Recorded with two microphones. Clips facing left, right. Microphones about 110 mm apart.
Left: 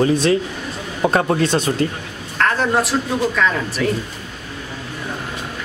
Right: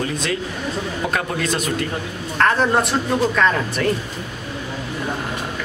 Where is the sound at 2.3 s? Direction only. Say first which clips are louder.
Right 1 dB; centre (ahead or behind).